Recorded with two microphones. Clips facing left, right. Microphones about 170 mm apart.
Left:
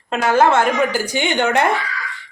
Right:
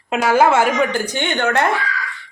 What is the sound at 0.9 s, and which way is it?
Speech, 10° left (ahead or behind).